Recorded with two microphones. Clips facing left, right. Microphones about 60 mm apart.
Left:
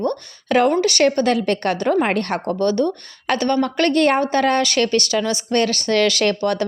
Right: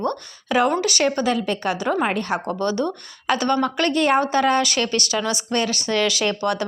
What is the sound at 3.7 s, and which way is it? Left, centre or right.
Speech, left.